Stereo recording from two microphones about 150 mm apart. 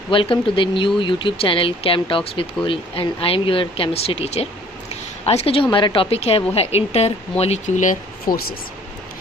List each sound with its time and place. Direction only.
0.1 s a woman's voice: 35° left (ahead or behind); by 8.5 s 65° left (ahead or behind)